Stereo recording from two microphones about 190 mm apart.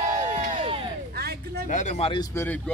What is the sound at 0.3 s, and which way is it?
Crowd, 40° right (ahead or behind).